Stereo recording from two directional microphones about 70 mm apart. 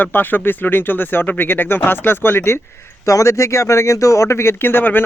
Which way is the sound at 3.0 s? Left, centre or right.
Left.